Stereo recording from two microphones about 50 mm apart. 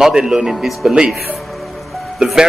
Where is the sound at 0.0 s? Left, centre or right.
Centre.